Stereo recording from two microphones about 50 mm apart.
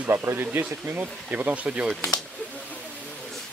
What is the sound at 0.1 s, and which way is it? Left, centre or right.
Speech, right.